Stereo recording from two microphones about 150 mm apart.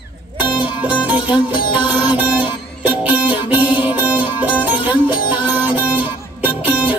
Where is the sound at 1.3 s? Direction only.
35° left (ahead or behind).